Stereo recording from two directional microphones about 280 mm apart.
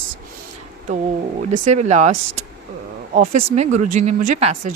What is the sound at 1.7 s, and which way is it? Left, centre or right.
Speech, right.